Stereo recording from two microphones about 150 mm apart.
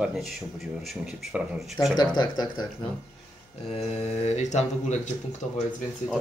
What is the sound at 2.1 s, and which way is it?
Speech, 30° left (ahead or behind).